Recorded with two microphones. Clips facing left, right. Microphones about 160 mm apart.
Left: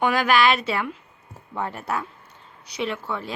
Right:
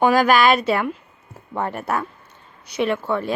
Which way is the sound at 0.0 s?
40° right (ahead or behind).